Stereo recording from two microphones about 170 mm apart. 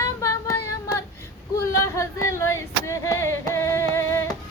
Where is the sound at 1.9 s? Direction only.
15° left (ahead or behind).